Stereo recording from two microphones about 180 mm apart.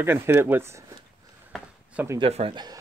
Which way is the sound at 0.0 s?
10° right (ahead or behind).